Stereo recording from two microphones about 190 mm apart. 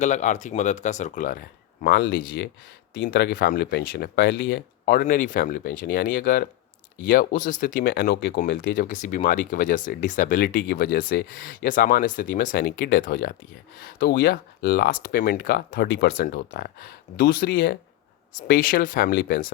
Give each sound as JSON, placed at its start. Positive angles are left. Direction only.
{"t": 0.0, "sound": "speech", "side_deg": 40}
{"t": 4.4, "sound": "speech", "side_deg": 70}
{"t": 4.9, "sound": "speech", "side_deg": 45}